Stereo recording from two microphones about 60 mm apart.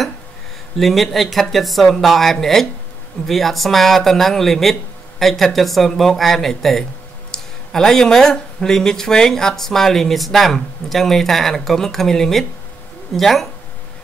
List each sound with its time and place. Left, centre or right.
0.7 s speech: centre